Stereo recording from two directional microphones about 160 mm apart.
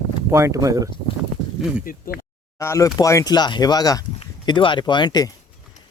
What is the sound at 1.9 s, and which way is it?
Speech, 65° left (ahead or behind).